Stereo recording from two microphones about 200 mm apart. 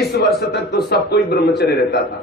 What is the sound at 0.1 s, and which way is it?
A man's voice, 55° left (ahead or behind).